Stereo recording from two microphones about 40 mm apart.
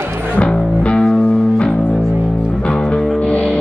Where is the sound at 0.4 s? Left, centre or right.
Left.